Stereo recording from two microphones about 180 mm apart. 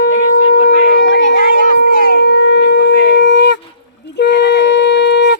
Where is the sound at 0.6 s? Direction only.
60° left (ahead or behind).